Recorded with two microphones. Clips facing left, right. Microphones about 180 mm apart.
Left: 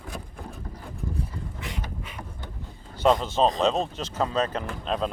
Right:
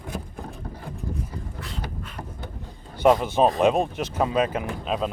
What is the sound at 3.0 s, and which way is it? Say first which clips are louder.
Speech: right 3 dB; 15° right (ahead or behind).